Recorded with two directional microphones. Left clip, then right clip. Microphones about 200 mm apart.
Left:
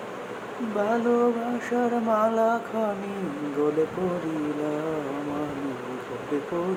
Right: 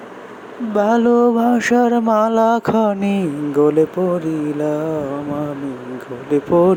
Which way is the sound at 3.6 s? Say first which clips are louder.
Right 10 dB; 40° right (ahead or behind).